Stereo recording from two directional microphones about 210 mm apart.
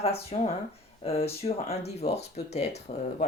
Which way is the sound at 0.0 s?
30° left (ahead or behind).